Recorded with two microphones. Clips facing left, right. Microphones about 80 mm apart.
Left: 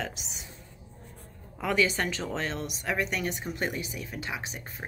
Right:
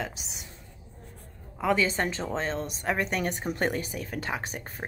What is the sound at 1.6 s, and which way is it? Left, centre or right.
A woman's voice, right.